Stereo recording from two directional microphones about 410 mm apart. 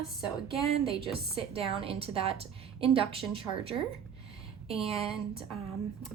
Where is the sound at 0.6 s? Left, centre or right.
Centre.